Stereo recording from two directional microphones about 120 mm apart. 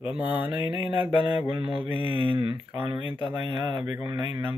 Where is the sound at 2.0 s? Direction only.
45° right (ahead or behind).